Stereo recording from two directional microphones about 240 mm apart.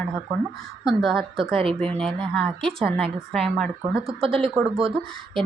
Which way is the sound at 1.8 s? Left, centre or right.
Centre.